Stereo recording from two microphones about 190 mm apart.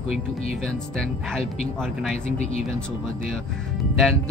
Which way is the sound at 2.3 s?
35° left (ahead or behind).